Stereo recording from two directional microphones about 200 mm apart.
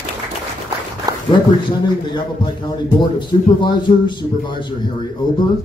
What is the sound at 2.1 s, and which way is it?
A man's voice, 20° left (ahead or behind).